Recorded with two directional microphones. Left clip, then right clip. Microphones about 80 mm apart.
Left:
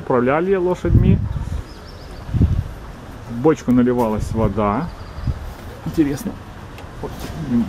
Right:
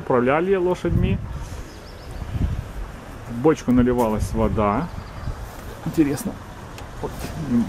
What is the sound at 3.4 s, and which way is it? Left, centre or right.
Speech, centre.